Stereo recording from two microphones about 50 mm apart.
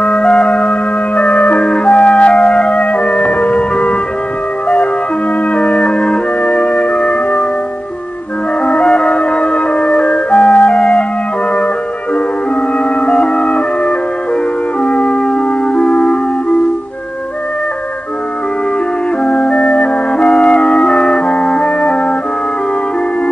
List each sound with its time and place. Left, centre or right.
0.0 s music: left
5.5 s music: left
8.6 s music: left
12.7 s music: left
19.2 s music: left